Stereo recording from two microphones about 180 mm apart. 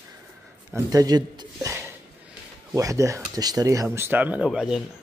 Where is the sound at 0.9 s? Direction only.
20° right (ahead or behind).